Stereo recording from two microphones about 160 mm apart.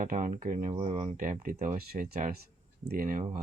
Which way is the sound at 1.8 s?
75° right (ahead or behind).